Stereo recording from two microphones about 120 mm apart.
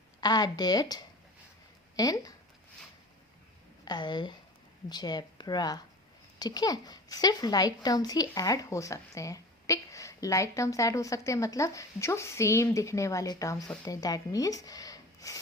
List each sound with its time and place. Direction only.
0.2 s a child's voice: 35° left (ahead or behind)
3.8 s a child's voice: 35° left (ahead or behind)